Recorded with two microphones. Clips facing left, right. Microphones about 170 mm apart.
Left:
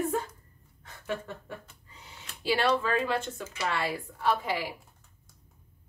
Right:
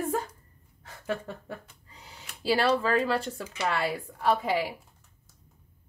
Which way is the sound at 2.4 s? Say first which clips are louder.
Right 2 dB; 35° right (ahead or behind).